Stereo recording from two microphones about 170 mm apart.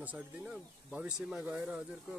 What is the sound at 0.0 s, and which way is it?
Speech, 10° right (ahead or behind).